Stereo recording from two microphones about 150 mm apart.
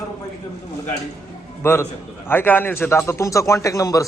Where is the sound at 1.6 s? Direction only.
15° left (ahead or behind).